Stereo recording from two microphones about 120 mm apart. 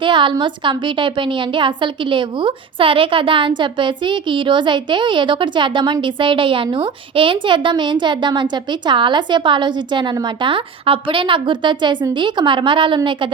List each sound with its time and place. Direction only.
0.0 s a woman's voice: 45° right (ahead or behind)